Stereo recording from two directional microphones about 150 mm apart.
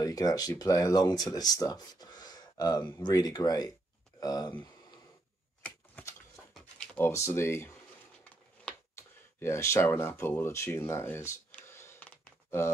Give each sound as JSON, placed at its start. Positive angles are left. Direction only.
{"t": 0.0, "sound": "speech", "side_deg": 25}
{"t": 5.6, "sound": "typewriter", "side_deg": 10}
{"t": 7.0, "sound": "speech", "side_deg": 20}
{"t": 8.2, "sound": "a sound", "side_deg": 15}